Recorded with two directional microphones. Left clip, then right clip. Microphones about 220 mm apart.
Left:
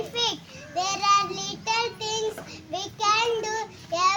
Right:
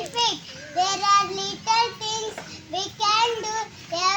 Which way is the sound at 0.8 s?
35° left (ahead or behind).